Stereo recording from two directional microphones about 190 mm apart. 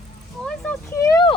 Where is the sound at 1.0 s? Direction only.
20° left (ahead or behind).